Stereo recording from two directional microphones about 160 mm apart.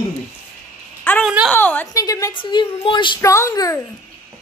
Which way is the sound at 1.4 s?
10° left (ahead or behind).